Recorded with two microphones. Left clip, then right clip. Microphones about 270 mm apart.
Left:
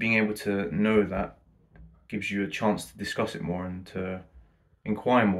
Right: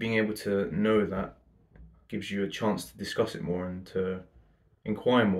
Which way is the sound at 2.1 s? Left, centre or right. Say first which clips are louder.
Left 2 dB; left.